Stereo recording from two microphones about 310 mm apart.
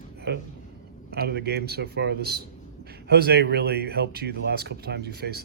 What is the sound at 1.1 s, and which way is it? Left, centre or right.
Speech, right.